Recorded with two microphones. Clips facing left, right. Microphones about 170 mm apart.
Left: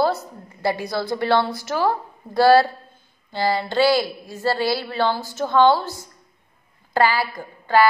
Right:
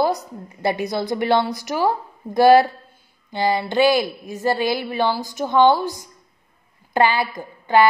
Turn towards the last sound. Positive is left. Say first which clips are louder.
# right 1 dB
turn(degrees=-20)  # may be behind; listen again after turning